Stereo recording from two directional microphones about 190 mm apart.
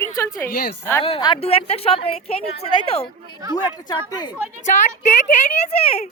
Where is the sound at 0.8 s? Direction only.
15° left (ahead or behind).